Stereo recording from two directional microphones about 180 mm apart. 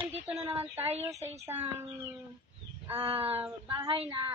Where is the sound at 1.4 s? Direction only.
10° right (ahead or behind).